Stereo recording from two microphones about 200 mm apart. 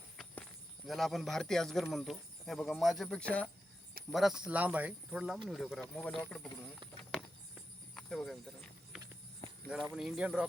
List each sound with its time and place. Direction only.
0.9 s speech: centre (ahead or behind)
7.1 s a sound: centre (ahead or behind)
9.9 s speech: centre (ahead or behind)